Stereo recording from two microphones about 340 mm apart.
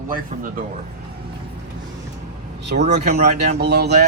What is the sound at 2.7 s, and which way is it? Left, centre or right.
Speech, right.